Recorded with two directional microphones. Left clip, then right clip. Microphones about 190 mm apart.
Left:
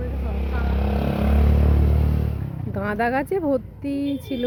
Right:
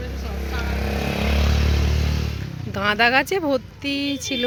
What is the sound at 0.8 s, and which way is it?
Speech, 50° right (ahead or behind).